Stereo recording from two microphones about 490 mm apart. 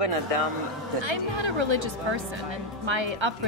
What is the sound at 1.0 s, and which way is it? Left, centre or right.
Speech, right.